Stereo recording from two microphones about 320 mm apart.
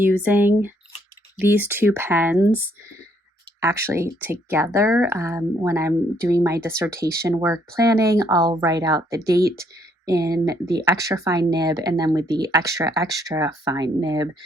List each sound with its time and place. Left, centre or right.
0.0 s speech: centre
3.6 s speech: centre